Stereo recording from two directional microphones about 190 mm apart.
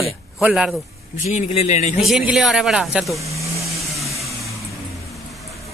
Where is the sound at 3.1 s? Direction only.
15° right (ahead or behind).